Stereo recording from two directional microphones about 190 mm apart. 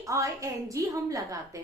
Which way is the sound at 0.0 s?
15° right (ahead or behind).